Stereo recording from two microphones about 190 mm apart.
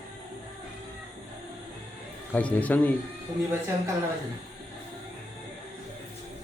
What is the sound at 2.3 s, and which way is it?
Speech, 10° left (ahead or behind).